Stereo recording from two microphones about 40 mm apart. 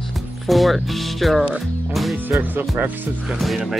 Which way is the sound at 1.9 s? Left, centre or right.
Centre.